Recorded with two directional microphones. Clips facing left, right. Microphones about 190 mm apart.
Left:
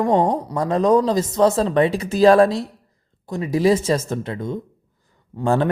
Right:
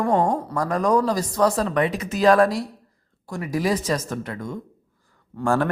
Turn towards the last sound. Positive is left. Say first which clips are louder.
# left 2 dB
turn(degrees=20)  # may be behind; listen again after turning